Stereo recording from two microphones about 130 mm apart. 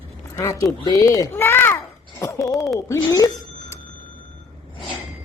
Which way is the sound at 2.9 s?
25° left (ahead or behind).